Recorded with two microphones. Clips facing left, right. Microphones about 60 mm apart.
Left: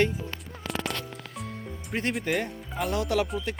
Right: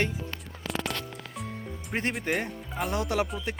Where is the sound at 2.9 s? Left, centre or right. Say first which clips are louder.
Left 2 dB; right.